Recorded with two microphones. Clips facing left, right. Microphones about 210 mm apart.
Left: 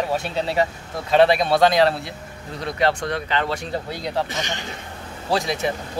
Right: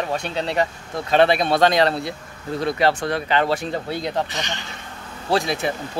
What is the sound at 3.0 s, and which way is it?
Speech, 30° right (ahead or behind).